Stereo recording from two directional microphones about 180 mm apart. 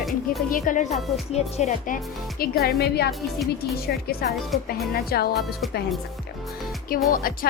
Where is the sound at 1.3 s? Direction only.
40° left (ahead or behind).